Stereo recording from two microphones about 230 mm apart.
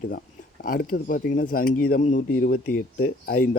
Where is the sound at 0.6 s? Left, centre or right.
Left.